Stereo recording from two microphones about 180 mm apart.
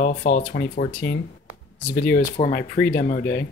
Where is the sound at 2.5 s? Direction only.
60° left (ahead or behind).